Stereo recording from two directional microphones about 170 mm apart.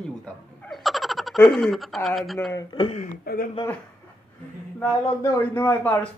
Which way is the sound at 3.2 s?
60° left (ahead or behind).